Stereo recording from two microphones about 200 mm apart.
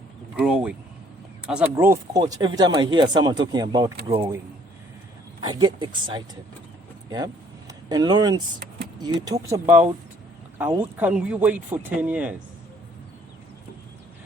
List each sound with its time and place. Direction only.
0.3 s speech: 5° right (ahead or behind); by 4.3 s 25° right (ahead or behind)
5.4 s speech: 20° right (ahead or behind)
7.7 s speech: 20° right (ahead or behind)